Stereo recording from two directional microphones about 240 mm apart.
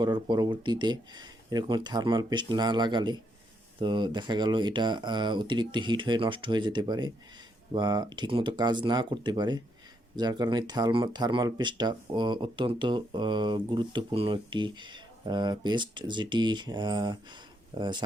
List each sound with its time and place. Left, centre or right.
0.0 s speech: centre